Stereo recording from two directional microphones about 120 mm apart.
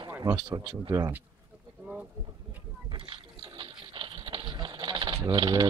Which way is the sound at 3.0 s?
45° right (ahead or behind).